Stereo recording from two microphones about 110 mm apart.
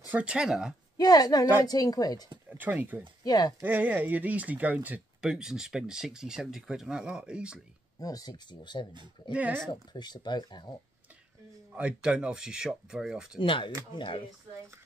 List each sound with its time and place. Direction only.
0.1 s speech: 10° right (ahead or behind)
0.9 s speech: 35° left (ahead or behind)
2.5 s speech: 15° right (ahead or behind)
3.3 s speech: 35° left (ahead or behind)
3.6 s speech: 15° right (ahead or behind)
8.0 s speech: 35° left (ahead or behind)
9.3 s speech: 15° right (ahead or behind)
9.7 s speech: 40° left (ahead or behind)
11.7 s speech: 10° right (ahead or behind)
13.4 s speech: 50° left (ahead or behind)